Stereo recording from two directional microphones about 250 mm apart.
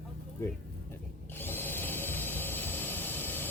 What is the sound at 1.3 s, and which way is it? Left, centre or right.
Tools, centre.